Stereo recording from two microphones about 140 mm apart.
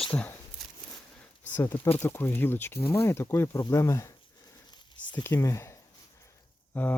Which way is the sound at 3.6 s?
20° left (ahead or behind).